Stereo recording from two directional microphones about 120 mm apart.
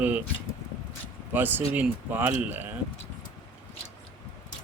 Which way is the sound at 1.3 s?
15° right (ahead or behind).